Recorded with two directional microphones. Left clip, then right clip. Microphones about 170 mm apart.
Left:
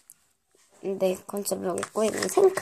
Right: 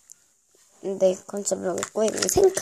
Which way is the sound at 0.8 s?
15° right (ahead or behind).